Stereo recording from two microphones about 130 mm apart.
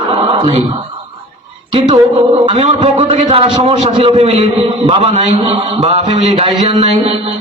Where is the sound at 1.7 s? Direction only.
30° right (ahead or behind).